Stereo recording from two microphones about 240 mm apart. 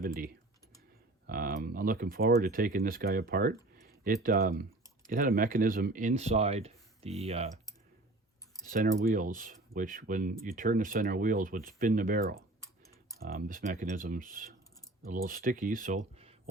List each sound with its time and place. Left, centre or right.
1.3 s speech: right
8.6 s speech: right